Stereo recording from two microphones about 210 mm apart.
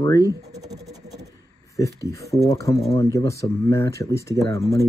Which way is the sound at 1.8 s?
15° left (ahead or behind).